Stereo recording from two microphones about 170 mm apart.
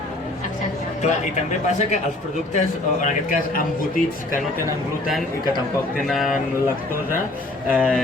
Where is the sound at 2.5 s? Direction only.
45° left (ahead or behind).